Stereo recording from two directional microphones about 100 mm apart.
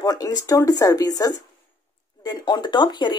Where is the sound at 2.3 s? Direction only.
45° left (ahead or behind).